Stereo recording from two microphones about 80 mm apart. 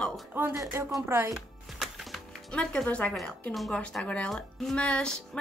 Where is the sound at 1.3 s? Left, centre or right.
Centre.